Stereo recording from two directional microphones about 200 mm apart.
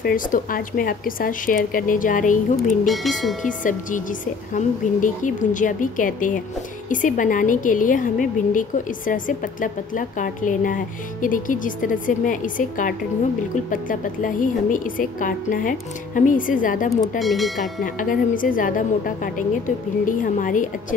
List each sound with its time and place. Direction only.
0.0 s speech: 45° left (ahead or behind)
2.9 s speech: centre (ahead or behind)
3.4 s a woman's voice: 40° left (ahead or behind)
17.2 s speech: centre (ahead or behind)
17.8 s a woman's voice: 45° left (ahead or behind)